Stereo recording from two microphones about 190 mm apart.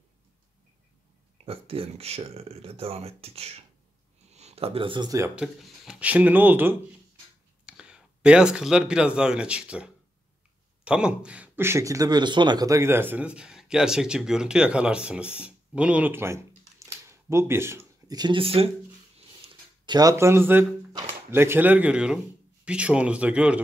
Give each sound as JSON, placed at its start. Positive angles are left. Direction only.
{"t": 1.4, "sound": "speech", "side_deg": -30}
{"t": 5.3, "sound": "speech", "side_deg": -5}
{"t": 16.8, "sound": "a sound", "side_deg": -15}
{"t": 21.3, "sound": "speech", "side_deg": -10}